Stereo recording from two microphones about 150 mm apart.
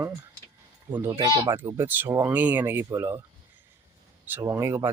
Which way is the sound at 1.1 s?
30° right (ahead or behind).